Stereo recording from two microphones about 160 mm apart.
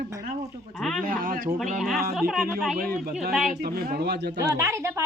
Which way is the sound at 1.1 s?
60° right (ahead or behind).